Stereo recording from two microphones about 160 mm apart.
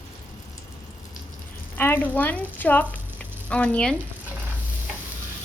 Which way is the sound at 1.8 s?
10° left (ahead or behind).